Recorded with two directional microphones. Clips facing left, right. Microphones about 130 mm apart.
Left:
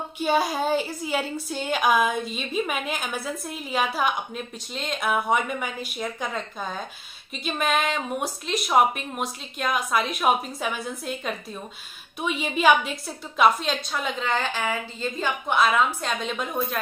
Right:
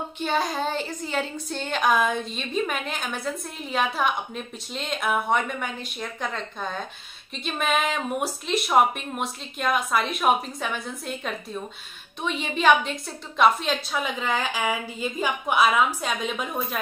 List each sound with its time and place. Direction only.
0.2 s a woman's voice: 10° left (ahead or behind)